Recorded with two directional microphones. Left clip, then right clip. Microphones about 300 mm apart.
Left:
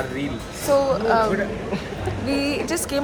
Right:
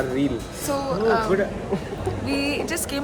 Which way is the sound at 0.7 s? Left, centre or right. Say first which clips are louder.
Left 4 dB; centre.